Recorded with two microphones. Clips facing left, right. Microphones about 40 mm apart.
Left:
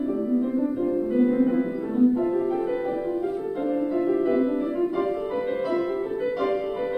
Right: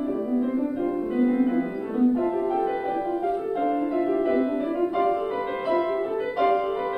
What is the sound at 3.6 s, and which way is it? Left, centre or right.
Music, right.